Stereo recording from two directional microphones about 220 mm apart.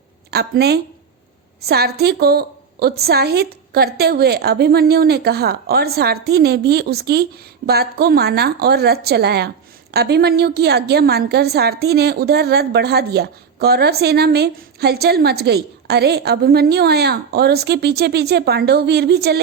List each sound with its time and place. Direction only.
0.3 s a woman's voice: 45° right (ahead or behind)